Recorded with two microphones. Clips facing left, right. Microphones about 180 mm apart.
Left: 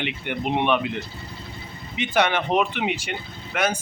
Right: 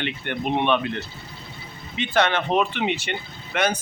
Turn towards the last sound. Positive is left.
turn(degrees=5)  # may be behind; listen again after turning